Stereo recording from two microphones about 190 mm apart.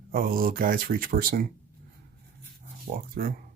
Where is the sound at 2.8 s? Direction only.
50° right (ahead or behind).